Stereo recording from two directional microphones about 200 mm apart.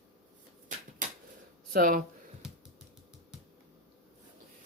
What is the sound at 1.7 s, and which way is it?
Speech, 45° right (ahead or behind).